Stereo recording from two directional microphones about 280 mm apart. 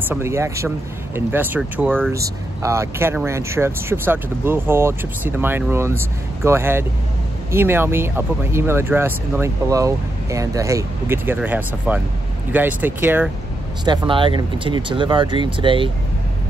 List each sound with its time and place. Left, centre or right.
0.0 s speech: centre
13.8 s speech: centre